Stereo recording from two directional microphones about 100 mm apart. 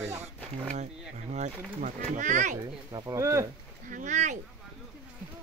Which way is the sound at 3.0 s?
30° right (ahead or behind).